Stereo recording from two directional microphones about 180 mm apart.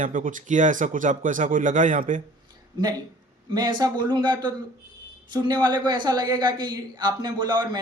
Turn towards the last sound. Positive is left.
turn(degrees=-25)  # may be behind; listen again after turning